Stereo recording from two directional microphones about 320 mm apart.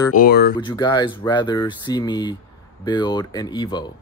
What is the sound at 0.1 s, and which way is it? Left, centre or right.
Speech, left.